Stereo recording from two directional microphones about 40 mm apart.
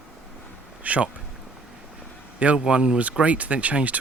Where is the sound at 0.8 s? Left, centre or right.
Right.